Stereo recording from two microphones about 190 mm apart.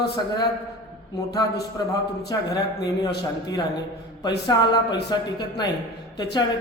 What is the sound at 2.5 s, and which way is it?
Speech, 20° left (ahead or behind).